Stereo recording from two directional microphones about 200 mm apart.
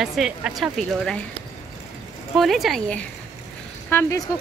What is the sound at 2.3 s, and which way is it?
Speech, centre (ahead or behind).